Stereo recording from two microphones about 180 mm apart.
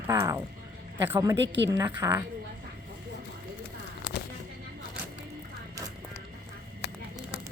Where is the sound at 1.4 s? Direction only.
85° right.